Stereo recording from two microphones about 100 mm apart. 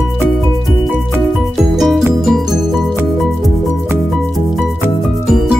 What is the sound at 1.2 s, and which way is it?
Music, centre (ahead or behind).